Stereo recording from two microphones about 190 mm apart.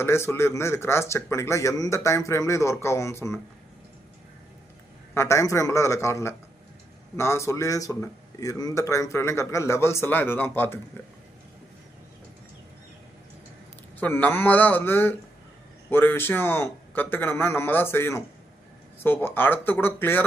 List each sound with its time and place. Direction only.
0.0 s speech: 15° left (ahead or behind)
5.1 s speech: 15° left (ahead or behind)
14.0 s speech: 10° left (ahead or behind)